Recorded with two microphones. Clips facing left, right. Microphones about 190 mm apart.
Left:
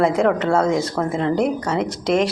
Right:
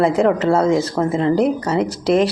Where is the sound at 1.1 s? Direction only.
Centre (ahead or behind).